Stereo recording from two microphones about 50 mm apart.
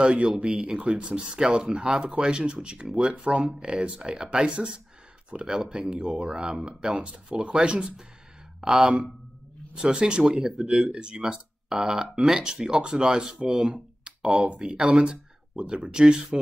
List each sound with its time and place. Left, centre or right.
0.0 s speech: centre
10.9 s speech: centre
13.7 s a sound: centre
14.5 s speech: centre